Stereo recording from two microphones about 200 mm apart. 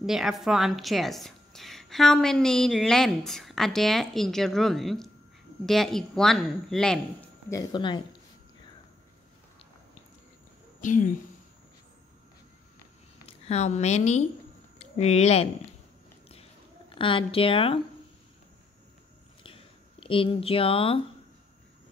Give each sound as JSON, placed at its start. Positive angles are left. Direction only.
{"t": 0.0, "sound": "a woman's voice", "side_deg": 0}
{"t": 7.4, "sound": "speech", "side_deg": 20}
{"t": 10.8, "sound": "speech", "side_deg": 40}
{"t": 13.5, "sound": "a woman's voice", "side_deg": 35}
{"t": 17.0, "sound": "speech", "side_deg": 25}
{"t": 19.4, "sound": "a sound", "side_deg": 25}